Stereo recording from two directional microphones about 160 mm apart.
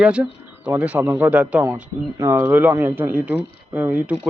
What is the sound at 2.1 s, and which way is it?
Speech, 20° right (ahead or behind).